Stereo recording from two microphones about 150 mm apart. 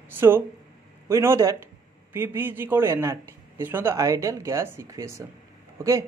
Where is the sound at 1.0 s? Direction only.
15° right (ahead or behind).